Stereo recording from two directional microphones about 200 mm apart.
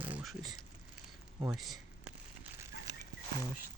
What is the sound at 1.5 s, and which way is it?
Speech, centre (ahead or behind).